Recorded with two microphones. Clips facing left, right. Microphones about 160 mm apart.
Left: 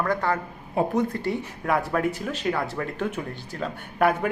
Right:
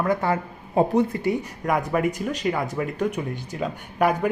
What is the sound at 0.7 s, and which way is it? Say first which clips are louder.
Speech: right 4 dB; 35° right (ahead or behind).